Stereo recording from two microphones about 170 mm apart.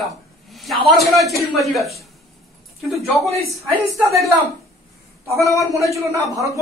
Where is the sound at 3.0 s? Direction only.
Centre (ahead or behind).